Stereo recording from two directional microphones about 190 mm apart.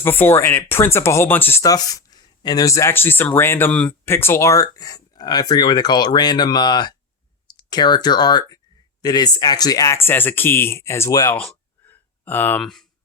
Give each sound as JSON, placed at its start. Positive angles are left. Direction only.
{"t": 0.0, "sound": "speech", "side_deg": 10}